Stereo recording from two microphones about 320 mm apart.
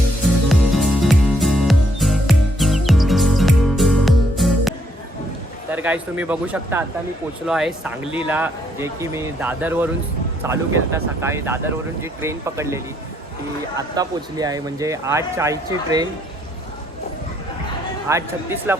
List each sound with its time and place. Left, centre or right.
0.4 s music: centre
5.7 s speech: centre
18.1 s speech: centre